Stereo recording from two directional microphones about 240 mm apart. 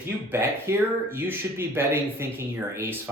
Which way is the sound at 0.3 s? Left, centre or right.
Centre.